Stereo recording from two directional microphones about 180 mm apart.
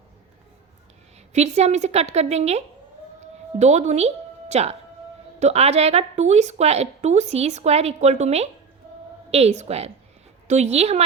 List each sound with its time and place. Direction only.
1.3 s a woman's voice: 40° right (ahead or behind)